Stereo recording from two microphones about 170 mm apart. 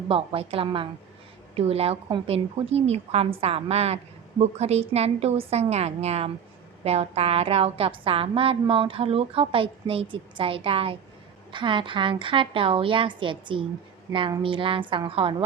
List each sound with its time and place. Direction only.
0.1 s a woman's voice: 35° right (ahead or behind)